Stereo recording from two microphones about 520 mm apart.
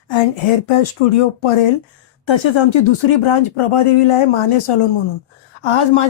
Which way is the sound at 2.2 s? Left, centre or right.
Left.